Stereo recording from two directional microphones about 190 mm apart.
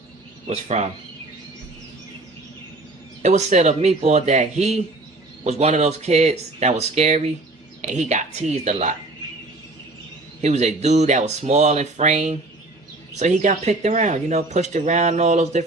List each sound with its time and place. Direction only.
0.4 s speech: 35° right (ahead or behind)
3.2 s speech: 40° right (ahead or behind)
10.4 s speech: 35° right (ahead or behind)